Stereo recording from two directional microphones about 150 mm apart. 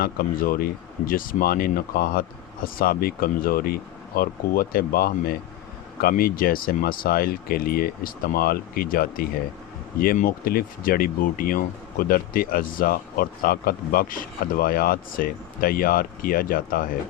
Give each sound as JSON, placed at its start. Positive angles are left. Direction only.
{"t": 0.0, "sound": "speech", "side_deg": 75}